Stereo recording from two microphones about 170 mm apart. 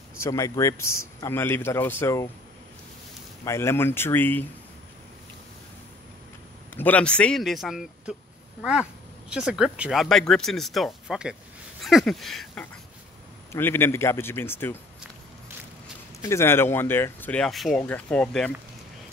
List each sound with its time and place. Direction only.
0.2 s a man's voice: 20° left (ahead or behind)
3.4 s a man's voice: 15° left (ahead or behind)
6.7 s speech: 10° left (ahead or behind)
9.3 s speech: 5° right (ahead or behind)
13.5 s a man's voice: 15° left (ahead or behind)
16.2 s a man's voice: 15° left (ahead or behind)